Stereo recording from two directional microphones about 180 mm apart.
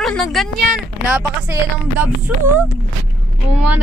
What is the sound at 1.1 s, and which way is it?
Speech, 10° right (ahead or behind).